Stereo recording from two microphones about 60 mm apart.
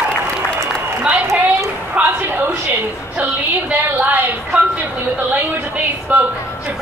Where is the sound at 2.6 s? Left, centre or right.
Right.